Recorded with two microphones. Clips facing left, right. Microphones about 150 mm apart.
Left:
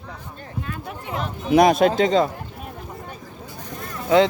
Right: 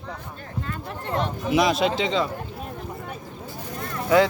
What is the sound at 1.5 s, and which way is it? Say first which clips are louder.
Speech: left 6 dB; 50° left (ahead or behind).